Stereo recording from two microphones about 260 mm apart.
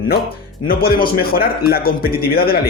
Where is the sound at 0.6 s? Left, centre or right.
Left.